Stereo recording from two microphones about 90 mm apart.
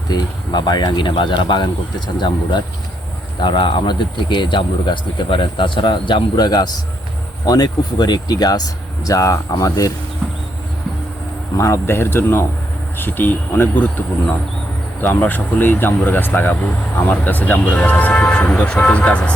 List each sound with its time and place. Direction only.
0.1 s speech: 55° left (ahead or behind); by 9.9 s 40° left (ahead or behind)
11.5 s speech: 30° left (ahead or behind)
15.0 s speech: 20° left (ahead or behind)